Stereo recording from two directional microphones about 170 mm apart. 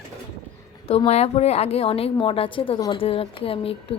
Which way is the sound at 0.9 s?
40° left (ahead or behind).